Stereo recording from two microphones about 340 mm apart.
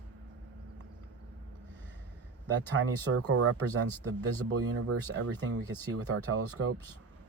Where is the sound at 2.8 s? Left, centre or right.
Right.